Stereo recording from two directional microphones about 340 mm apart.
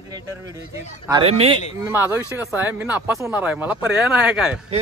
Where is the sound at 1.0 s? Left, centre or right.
Centre.